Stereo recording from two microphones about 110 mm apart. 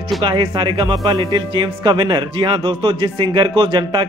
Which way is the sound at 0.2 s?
45° right (ahead or behind).